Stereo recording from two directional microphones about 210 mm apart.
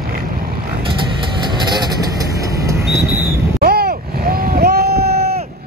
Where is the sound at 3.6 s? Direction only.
45° right (ahead or behind).